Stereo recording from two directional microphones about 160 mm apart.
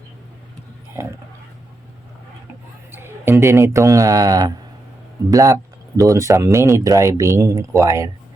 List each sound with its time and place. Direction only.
2.9 s a man's voice: 15° right (ahead or behind)